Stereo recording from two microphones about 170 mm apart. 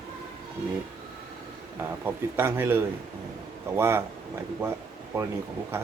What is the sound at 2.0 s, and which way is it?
A man's voice, 15° right (ahead or behind).